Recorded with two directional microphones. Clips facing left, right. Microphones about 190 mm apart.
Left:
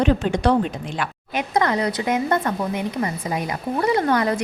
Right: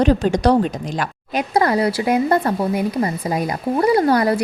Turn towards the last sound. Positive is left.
turn(degrees=-35)  # may be behind; listen again after turning